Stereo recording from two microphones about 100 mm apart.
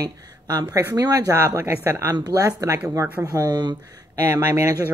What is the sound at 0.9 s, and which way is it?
Speech, 35° right (ahead or behind).